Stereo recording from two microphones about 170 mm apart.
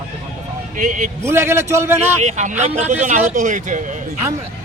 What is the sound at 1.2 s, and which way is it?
Speech, 15° right (ahead or behind).